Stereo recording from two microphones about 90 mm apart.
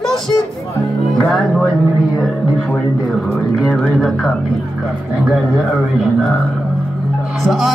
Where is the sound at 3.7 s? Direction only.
Centre (ahead or behind).